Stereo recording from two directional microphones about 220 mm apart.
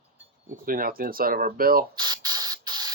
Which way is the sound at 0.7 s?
40° right (ahead or behind).